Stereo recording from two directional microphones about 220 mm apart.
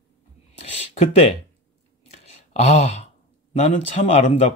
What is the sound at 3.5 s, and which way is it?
Speech, 30° left (ahead or behind).